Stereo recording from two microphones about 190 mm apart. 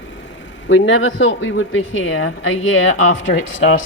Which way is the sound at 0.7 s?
80° left.